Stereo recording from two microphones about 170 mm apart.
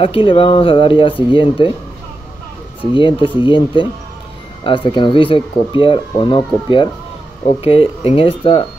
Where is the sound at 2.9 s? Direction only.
30° left (ahead or behind).